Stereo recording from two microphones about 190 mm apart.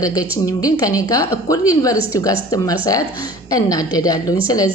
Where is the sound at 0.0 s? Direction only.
20° left (ahead or behind).